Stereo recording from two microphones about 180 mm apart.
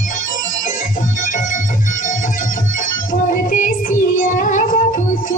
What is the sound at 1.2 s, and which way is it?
Music, 45° left (ahead or behind).